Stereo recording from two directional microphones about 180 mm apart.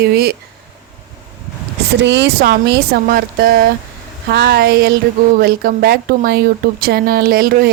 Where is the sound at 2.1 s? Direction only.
70° right (ahead or behind).